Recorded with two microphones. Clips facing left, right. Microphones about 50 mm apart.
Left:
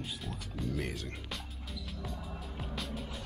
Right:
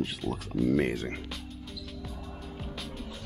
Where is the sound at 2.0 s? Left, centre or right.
Centre.